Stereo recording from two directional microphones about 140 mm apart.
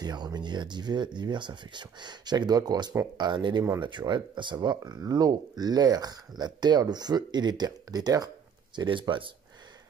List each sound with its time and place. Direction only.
0.0 s speech: 30° right (ahead or behind)